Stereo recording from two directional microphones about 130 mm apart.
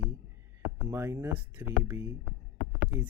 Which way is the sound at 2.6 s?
10° right (ahead or behind).